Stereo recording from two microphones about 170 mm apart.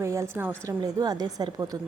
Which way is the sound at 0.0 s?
15° right (ahead or behind).